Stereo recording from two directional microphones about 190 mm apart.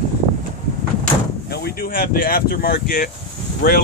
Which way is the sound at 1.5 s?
55° left (ahead or behind).